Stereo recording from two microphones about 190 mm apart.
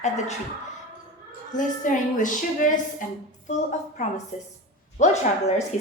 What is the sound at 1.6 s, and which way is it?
A woman's voice, 45° left (ahead or behind).